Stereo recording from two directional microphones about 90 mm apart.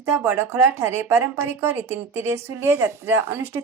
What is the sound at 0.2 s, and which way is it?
A woman's voice, 30° right (ahead or behind).